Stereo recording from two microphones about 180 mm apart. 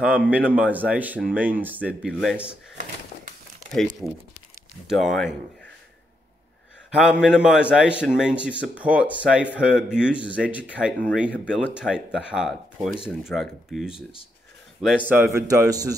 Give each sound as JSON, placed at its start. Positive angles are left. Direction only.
{"t": 0.0, "sound": "speech", "side_deg": -5}
{"t": 4.8, "sound": "speech", "side_deg": 0}
{"t": 7.0, "sound": "speech", "side_deg": -5}